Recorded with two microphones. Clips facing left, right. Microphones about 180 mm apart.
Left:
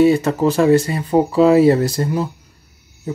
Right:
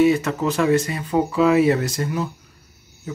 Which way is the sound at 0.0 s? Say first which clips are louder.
Left 4 dB; 30° left (ahead or behind).